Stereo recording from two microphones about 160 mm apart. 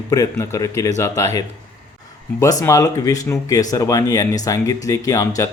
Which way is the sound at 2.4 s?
20° left (ahead or behind).